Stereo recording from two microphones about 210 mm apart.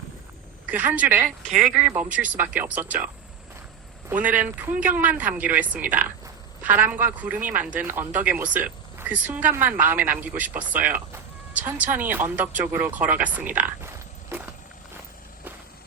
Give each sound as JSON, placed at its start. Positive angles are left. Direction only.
{"t": 0.7, "sound": "speech", "side_deg": -10}
{"t": 1.5, "sound": "speech", "side_deg": -35}
{"t": 1.7, "sound": "speech", "side_deg": -5}
{"t": 4.1, "sound": "speech", "side_deg": -5}